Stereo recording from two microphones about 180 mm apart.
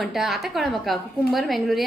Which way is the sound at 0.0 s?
Centre (ahead or behind).